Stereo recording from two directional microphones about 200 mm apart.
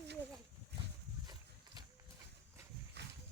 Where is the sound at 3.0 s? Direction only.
55° right (ahead or behind).